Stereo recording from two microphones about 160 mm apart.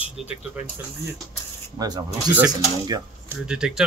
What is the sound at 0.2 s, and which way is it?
Speech, centre (ahead or behind).